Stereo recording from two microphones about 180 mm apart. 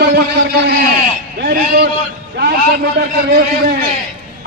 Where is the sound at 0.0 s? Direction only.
65° right (ahead or behind).